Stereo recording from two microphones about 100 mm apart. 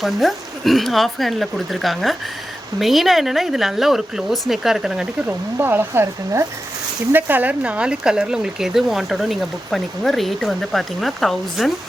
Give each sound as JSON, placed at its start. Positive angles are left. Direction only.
{"t": 0.0, "sound": "speech", "side_deg": 0}
{"t": 5.5, "sound": "speech", "side_deg": -20}